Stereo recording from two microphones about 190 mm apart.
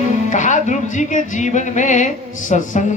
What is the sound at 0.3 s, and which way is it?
A woman's voice, 40° left (ahead or behind).